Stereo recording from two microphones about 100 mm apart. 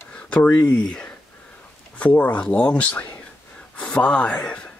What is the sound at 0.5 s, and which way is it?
Speech, 35° left (ahead or behind).